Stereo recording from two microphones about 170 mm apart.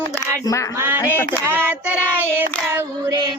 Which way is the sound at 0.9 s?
10° left (ahead or behind).